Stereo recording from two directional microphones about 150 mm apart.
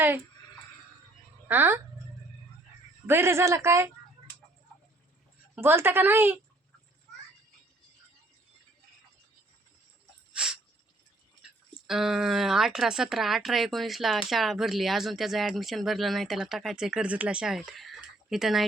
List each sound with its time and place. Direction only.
1.5 s a woman's voice: 15° right (ahead or behind)
3.1 s a woman's voice: 15° right (ahead or behind)
5.5 s a woman's voice: 15° right (ahead or behind)
10.3 s a sound: 5° right (ahead or behind)
11.9 s speech: 5° right (ahead or behind)